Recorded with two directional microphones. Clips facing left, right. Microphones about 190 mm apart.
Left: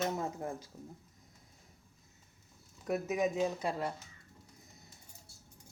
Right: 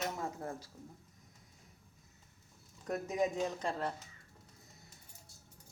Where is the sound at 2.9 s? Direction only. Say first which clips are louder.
Left 2 dB; 5° left (ahead or behind).